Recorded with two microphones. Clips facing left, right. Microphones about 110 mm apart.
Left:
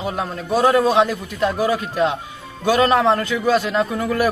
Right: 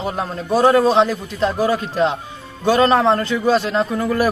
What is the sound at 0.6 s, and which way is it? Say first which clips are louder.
Speech: right 2 dB; 20° right (ahead or behind).